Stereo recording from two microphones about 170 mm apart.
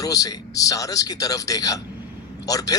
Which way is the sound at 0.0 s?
20° left (ahead or behind).